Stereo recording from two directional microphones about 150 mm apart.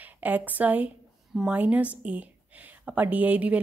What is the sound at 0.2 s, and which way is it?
Speech, 10° right (ahead or behind).